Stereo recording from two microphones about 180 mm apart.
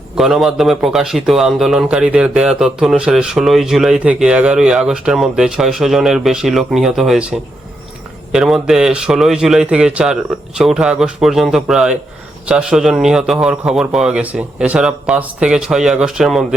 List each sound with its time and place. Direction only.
0.2 s a man's voice: centre (ahead or behind)